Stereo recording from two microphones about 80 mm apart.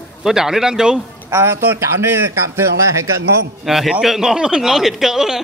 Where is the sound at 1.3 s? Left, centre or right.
Right.